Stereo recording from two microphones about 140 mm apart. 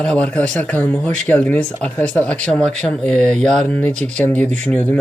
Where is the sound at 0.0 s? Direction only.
10° left (ahead or behind).